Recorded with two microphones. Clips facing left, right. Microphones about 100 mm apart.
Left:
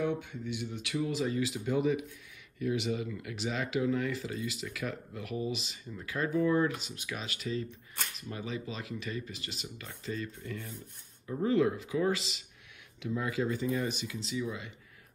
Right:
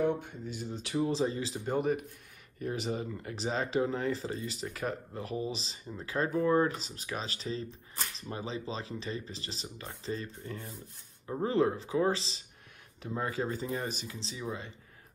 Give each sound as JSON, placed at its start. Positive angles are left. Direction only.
{"t": 0.0, "sound": "speech", "side_deg": -45}
{"t": 2.6, "sound": "speech", "side_deg": -40}